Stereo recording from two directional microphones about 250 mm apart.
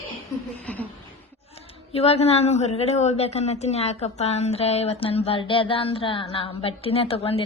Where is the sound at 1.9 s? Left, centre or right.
Left.